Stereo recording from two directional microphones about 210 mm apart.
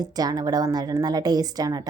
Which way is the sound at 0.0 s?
20° right (ahead or behind).